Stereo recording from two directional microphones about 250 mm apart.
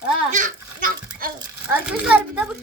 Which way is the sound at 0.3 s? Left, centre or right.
Right.